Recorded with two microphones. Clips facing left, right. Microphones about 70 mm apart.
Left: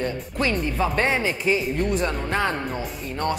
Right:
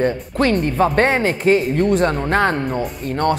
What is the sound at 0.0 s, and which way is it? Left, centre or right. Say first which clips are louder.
A woman's voice: right 7 dB; right.